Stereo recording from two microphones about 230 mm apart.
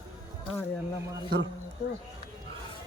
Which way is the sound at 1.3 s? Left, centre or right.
Right.